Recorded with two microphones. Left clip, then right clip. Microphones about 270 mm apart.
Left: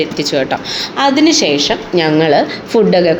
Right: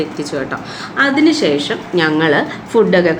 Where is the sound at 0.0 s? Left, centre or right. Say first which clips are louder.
Left 6 dB; centre.